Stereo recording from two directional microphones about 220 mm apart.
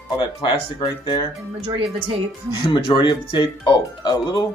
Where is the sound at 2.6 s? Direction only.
20° left (ahead or behind).